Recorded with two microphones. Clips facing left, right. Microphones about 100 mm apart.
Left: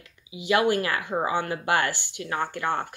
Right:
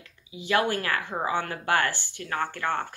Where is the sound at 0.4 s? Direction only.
15° left (ahead or behind).